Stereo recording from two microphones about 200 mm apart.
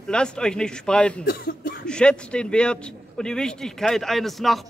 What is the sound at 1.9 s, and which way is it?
A man's voice, 5° left (ahead or behind).